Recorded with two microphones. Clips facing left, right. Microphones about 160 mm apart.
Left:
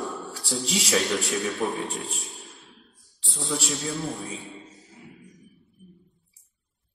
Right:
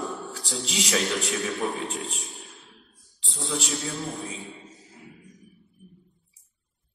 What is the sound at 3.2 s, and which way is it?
Speech, 40° left (ahead or behind).